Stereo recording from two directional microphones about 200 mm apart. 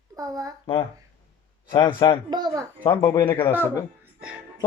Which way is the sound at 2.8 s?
20° left (ahead or behind).